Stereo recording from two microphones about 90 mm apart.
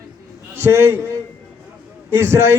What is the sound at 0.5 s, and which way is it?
Speech, 25° right (ahead or behind).